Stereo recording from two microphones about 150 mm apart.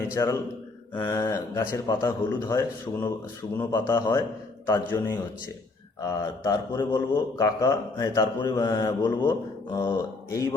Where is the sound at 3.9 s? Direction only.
25° left (ahead or behind).